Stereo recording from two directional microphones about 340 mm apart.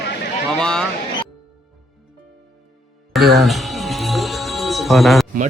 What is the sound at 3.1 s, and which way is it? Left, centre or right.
Music, centre.